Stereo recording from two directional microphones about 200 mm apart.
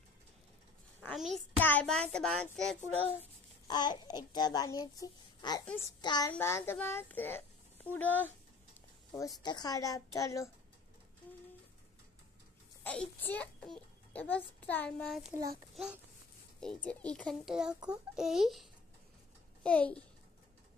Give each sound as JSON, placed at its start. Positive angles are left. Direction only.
{"t": 1.0, "sound": "a child's voice", "side_deg": 0}
{"t": 3.6, "sound": "babbling", "side_deg": 20}
{"t": 4.3, "sound": "a child's voice", "side_deg": 20}
{"t": 12.8, "sound": "a child's voice", "side_deg": 5}